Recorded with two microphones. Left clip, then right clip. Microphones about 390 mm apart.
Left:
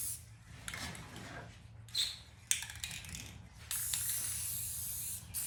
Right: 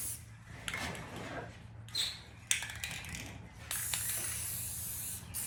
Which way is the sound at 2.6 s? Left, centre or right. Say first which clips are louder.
Right 4 dB; centre.